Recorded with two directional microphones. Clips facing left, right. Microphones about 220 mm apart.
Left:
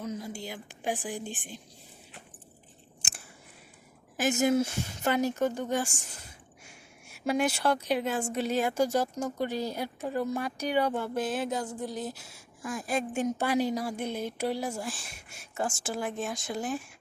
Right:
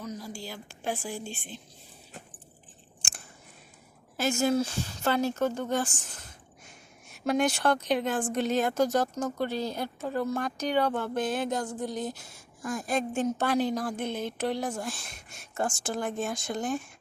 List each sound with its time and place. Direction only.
0.0 s a woman's voice: 25° left (ahead or behind)
4.2 s a woman's voice: 20° left (ahead or behind)